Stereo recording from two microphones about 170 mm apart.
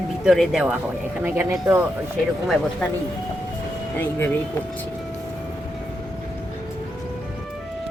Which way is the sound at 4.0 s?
10° left (ahead or behind).